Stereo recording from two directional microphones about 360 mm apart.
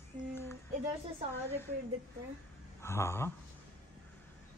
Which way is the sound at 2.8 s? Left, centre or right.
Centre.